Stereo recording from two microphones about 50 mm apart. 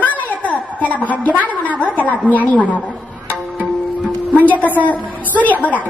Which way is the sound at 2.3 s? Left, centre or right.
Left.